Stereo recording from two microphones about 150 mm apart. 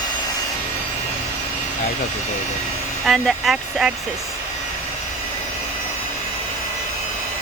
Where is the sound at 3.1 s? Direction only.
Centre (ahead or behind).